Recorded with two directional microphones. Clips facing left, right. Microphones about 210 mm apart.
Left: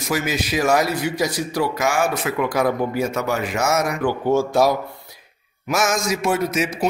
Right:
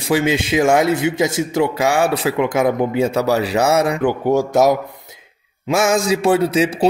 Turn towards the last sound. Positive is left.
turn(degrees=-30)  # may be behind; listen again after turning